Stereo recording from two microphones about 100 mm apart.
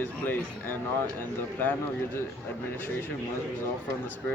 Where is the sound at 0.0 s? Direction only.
20° left (ahead or behind).